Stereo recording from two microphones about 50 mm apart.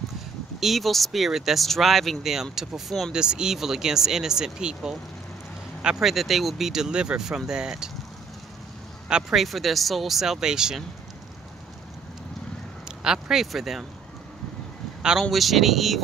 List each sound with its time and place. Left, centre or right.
0.6 s speech: centre
3.1 s speech: centre
5.8 s vehicle: centre
6.0 s speech: centre
9.3 s speech: centre
12.8 s a man's voice: centre
15.0 s speech: centre
15.3 s speech: centre